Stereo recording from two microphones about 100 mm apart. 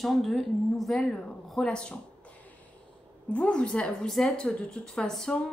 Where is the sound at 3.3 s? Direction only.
10° left (ahead or behind).